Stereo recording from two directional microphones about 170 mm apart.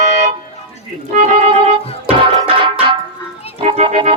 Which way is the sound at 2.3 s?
30° right (ahead or behind).